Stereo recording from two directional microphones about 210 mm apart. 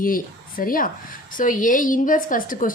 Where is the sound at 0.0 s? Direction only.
40° left (ahead or behind).